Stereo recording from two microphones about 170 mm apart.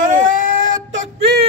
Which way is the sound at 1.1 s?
80° right.